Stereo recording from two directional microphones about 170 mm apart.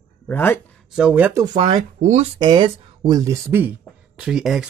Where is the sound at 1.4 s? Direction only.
30° right (ahead or behind).